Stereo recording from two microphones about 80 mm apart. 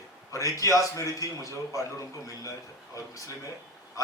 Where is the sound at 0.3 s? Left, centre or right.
Left.